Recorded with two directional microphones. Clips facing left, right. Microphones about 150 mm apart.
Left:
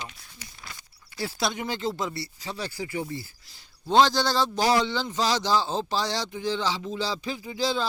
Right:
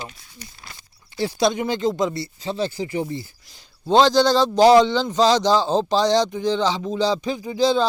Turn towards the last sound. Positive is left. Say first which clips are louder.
# right 8 dB
turn(degrees=-20)  # may be behind; listen again after turning